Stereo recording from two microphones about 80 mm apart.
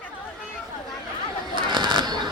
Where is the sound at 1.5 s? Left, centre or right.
Right.